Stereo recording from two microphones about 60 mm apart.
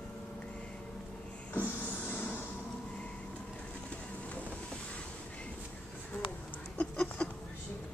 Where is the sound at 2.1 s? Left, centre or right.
Left.